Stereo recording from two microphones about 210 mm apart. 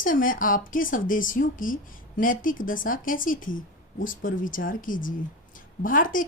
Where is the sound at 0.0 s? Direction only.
40° left (ahead or behind).